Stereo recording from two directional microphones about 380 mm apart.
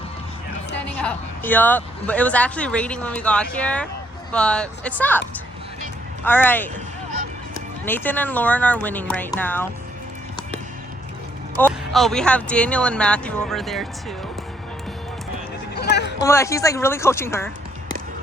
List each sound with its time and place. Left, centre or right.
0.9 s speech: centre
6.2 s speech: centre
7.9 s speech: centre
11.6 s speech: centre
15.7 s a sound: left
16.2 s speech: centre